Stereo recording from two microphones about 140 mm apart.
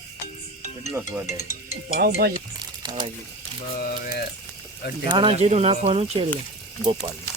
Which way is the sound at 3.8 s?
90° left.